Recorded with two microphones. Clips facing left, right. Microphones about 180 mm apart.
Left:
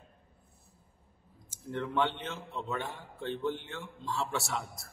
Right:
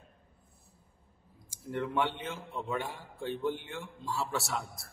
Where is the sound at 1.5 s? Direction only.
10° right (ahead or behind).